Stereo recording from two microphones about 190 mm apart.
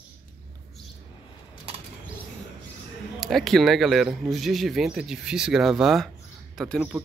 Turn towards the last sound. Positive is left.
turn(degrees=0)  # may be behind; listen again after turning